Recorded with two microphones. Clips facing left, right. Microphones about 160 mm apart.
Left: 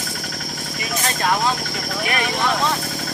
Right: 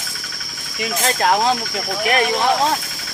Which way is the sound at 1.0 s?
60° right (ahead or behind).